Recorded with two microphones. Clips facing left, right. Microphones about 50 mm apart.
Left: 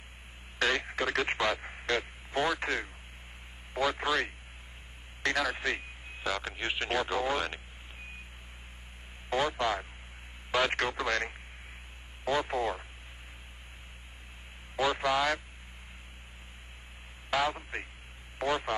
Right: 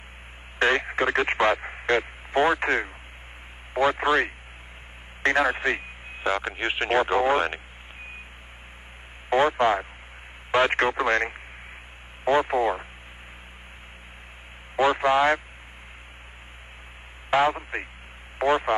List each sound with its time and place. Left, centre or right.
0.6 s speech: right
9.3 s speech: right
14.8 s speech: right
17.3 s speech: right